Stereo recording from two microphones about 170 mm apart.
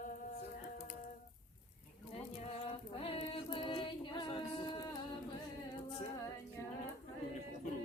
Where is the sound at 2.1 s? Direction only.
35° left (ahead or behind).